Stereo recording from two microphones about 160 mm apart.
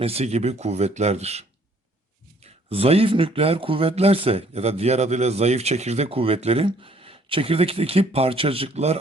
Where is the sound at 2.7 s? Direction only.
40° right (ahead or behind).